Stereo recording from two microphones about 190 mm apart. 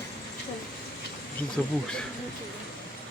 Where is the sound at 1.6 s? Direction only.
5° left (ahead or behind).